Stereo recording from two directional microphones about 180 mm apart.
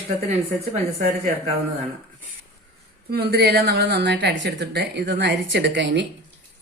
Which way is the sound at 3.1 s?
60° right (ahead or behind).